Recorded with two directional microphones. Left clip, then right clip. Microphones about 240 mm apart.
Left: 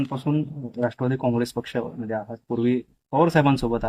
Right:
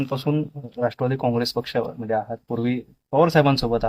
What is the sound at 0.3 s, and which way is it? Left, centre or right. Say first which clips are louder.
Speech: right 1 dB; right.